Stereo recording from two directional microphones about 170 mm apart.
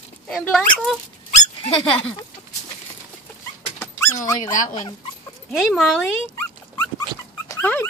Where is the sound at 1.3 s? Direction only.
40° left (ahead or behind).